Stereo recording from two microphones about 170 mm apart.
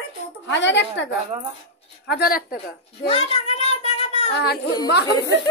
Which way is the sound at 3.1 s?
40° left (ahead or behind).